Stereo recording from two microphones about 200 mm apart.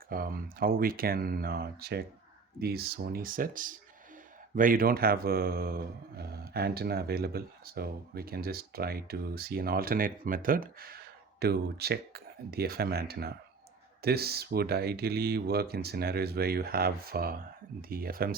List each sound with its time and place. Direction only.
0.1 s speech: 45° right (ahead or behind)